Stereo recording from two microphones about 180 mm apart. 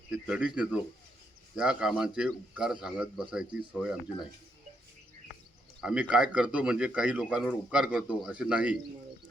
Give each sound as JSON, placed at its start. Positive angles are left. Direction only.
{"t": 0.1, "sound": "speech", "side_deg": -5}
{"t": 5.8, "sound": "speech", "side_deg": -5}